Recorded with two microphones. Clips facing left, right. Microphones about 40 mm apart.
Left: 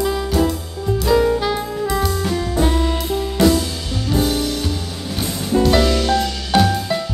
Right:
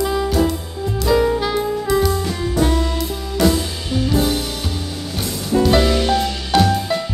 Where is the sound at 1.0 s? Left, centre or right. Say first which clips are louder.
Even; centre.